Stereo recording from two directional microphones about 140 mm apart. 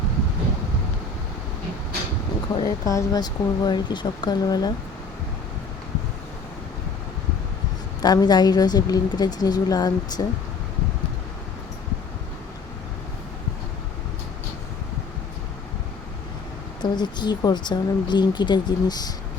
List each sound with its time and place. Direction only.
2.6 s a woman's voice: 25° left (ahead or behind)
8.0 s a woman's voice: 30° left (ahead or behind)
16.8 s speech: 30° left (ahead or behind)